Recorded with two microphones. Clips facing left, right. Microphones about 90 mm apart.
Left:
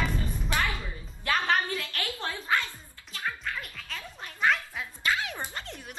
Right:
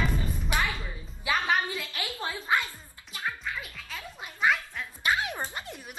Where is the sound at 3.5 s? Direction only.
5° right (ahead or behind).